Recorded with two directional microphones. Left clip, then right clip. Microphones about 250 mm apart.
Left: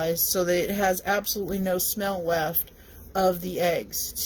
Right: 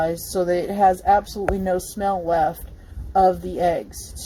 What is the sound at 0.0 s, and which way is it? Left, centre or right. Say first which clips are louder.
Speech: right 3 dB; left.